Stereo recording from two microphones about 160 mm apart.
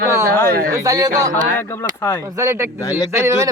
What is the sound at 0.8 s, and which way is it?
Speech, 20° right (ahead or behind).